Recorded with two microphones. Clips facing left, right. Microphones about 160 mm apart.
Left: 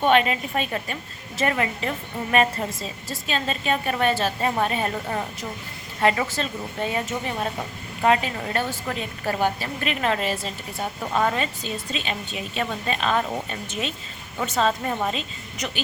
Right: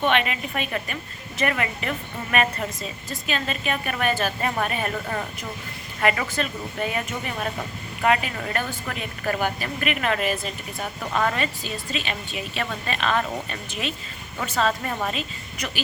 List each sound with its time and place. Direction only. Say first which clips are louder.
0.0 s a woman's voice: left 3 dB; 35° left (ahead or behind)